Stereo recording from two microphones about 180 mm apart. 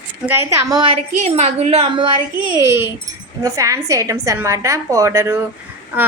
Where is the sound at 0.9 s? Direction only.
35° right (ahead or behind).